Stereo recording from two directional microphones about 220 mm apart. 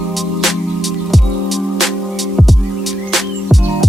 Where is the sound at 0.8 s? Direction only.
Centre (ahead or behind).